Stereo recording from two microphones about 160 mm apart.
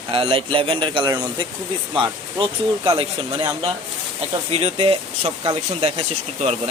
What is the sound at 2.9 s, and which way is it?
Speech, 35° right (ahead or behind).